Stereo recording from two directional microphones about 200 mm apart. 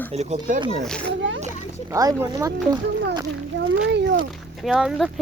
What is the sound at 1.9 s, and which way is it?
Speech, 15° right (ahead or behind).